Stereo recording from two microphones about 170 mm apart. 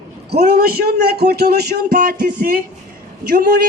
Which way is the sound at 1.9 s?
55° right (ahead or behind).